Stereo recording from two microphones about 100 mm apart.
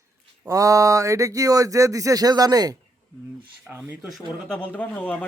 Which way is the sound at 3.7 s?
15° right (ahead or behind).